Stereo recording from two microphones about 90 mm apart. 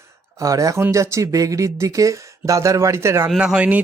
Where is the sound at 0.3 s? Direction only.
40° right (ahead or behind).